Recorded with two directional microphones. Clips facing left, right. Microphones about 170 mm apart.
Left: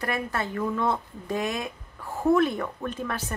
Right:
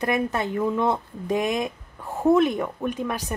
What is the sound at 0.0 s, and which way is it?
Speech, 20° right (ahead or behind).